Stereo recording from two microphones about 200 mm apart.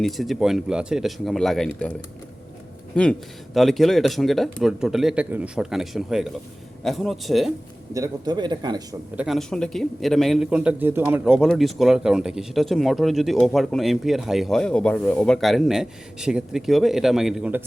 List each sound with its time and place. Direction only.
0.0 s a man's voice: centre (ahead or behind)
7.9 s speech: 20° right (ahead or behind)
9.1 s a man's voice: centre (ahead or behind)